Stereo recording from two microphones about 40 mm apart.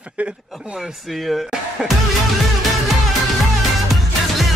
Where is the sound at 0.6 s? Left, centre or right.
Centre.